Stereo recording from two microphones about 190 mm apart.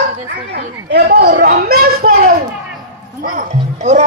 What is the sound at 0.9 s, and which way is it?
A man's voice, 60° right (ahead or behind).